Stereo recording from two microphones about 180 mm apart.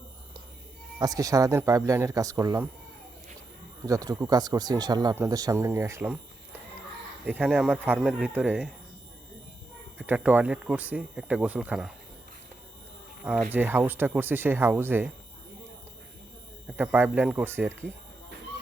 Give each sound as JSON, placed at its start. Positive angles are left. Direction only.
{"t": 0.9, "sound": "speech", "side_deg": -20}
{"t": 3.8, "sound": "speech", "side_deg": -20}
{"t": 7.3, "sound": "speech", "side_deg": -5}
{"t": 10.0, "sound": "speech", "side_deg": -10}
{"t": 13.2, "sound": "speech", "side_deg": -5}
{"t": 16.6, "sound": "speech", "side_deg": -10}